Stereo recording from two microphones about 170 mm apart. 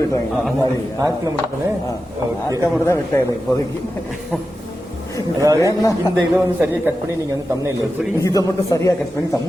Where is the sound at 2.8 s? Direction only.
15° left (ahead or behind).